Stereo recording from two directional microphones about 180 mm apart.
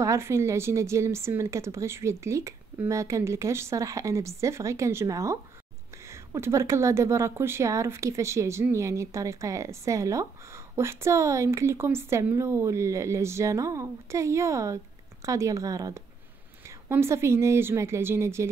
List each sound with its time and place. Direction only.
0.0 s speech: 15° right (ahead or behind)